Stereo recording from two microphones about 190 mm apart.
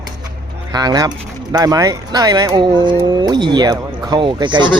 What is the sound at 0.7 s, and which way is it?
Speech, 20° right (ahead or behind).